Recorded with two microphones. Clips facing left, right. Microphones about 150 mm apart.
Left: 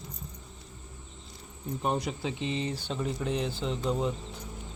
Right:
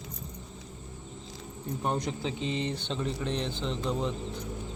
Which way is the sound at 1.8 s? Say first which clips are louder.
Left 1 dB; 10° left (ahead or behind).